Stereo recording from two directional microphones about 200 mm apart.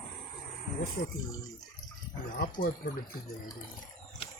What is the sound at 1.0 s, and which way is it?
Speech, 40° left (ahead or behind).